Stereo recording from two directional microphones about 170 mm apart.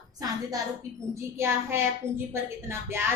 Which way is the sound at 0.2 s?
20° right (ahead or behind).